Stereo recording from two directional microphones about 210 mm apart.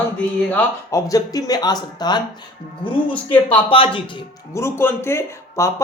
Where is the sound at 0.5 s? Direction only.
15° left (ahead or behind).